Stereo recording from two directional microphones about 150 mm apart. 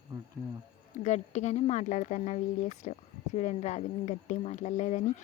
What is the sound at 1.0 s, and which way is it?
Speech, 50° left (ahead or behind).